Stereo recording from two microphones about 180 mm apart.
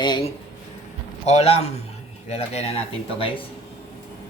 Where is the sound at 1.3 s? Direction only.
35° left (ahead or behind).